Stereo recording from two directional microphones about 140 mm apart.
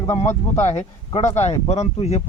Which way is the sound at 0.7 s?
50° left (ahead or behind).